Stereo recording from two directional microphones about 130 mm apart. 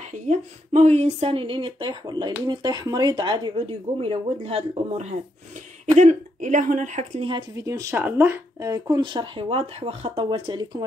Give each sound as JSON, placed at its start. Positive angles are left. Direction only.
{"t": 0.3, "sound": "speech", "side_deg": -60}
{"t": 5.9, "sound": "speech", "side_deg": -70}
{"t": 7.2, "sound": "speech", "side_deg": -40}
{"t": 7.5, "sound": "speech", "side_deg": -25}